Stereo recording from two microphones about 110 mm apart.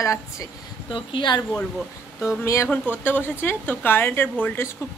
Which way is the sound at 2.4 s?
25° left (ahead or behind).